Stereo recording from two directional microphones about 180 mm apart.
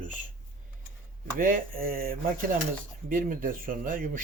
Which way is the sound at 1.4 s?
50° right (ahead or behind).